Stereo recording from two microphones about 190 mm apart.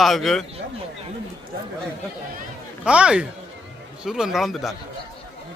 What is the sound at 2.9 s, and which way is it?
A man's voice, 5° right (ahead or behind).